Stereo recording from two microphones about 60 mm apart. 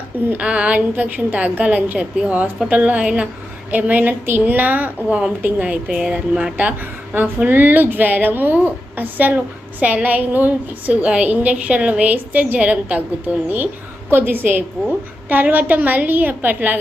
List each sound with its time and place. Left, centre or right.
0.3 s a woman's voice: centre
3.7 s a woman's voice: right